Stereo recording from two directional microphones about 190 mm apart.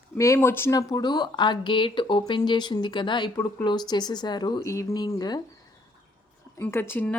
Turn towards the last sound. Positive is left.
turn(degrees=10)  # may be behind; listen again after turning